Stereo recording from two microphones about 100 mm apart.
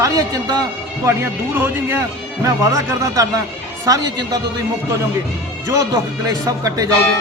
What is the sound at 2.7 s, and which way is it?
A man's voice, 35° right (ahead or behind).